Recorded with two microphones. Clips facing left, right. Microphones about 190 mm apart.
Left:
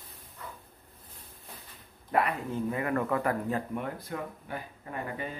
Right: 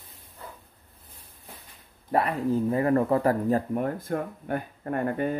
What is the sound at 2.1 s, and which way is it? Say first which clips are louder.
Speech: right 5 dB; 35° right (ahead or behind).